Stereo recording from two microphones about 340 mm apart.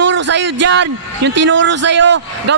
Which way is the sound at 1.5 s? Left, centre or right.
Right.